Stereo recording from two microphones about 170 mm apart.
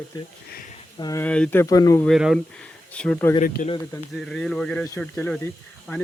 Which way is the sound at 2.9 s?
10° left (ahead or behind).